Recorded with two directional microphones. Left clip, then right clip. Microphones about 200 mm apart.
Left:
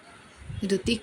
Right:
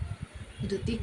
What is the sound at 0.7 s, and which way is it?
Speech, 40° left (ahead or behind).